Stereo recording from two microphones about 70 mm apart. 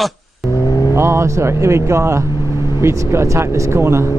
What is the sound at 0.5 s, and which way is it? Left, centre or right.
Vehicle, left.